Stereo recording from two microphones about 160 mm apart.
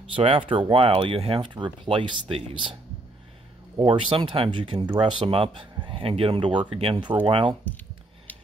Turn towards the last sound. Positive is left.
turn(degrees=-30)  # may be behind; listen again after turning